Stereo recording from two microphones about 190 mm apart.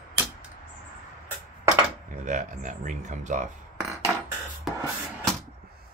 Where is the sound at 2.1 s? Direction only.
40° right (ahead or behind).